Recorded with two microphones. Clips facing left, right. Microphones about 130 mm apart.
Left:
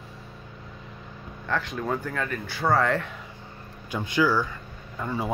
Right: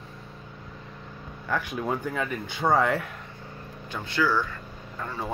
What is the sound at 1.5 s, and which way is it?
Speech, 10° right (ahead or behind).